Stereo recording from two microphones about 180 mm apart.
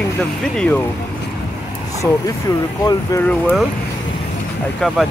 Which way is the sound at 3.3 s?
5° left (ahead or behind).